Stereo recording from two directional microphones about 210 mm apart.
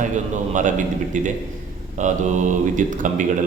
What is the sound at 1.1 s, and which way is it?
Speech, 35° right (ahead or behind).